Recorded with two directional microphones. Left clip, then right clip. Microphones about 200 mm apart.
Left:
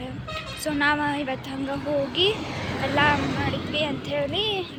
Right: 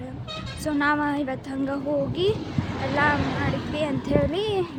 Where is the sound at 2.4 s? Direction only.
45° left (ahead or behind).